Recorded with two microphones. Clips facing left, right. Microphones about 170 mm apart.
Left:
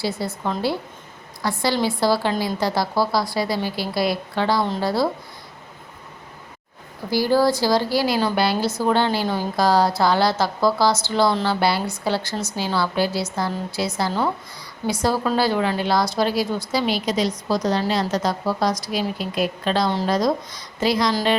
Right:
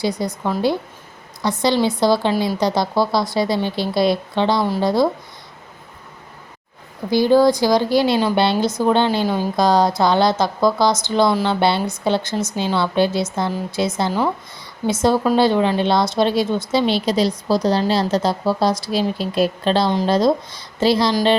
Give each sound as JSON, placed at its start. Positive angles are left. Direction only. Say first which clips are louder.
{"t": 0.0, "sound": "a woman's voice", "louder": "right 4 dB", "side_deg": -15}
{"t": 7.1, "sound": "speech", "louder": "right 5 dB", "side_deg": -20}